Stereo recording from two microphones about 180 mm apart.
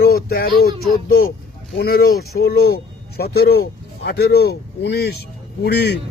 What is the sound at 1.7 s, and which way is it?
Speech, 60° left (ahead or behind).